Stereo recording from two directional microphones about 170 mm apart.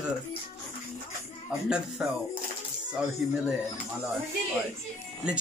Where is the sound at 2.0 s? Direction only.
5° right (ahead or behind).